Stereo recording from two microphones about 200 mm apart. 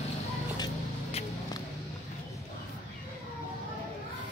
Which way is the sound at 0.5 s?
20° left (ahead or behind).